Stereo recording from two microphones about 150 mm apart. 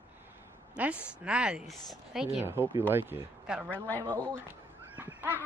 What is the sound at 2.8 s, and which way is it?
Speech, 15° right (ahead or behind).